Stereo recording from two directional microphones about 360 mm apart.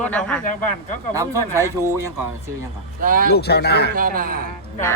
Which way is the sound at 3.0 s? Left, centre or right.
Right.